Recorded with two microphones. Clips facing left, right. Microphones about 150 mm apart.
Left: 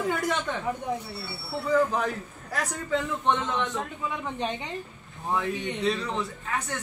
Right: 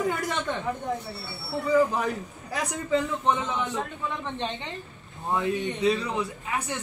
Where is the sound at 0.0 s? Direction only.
Centre (ahead or behind).